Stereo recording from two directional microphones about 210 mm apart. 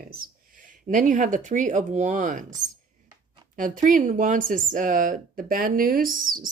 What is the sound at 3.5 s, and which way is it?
Speech, 40° right (ahead or behind).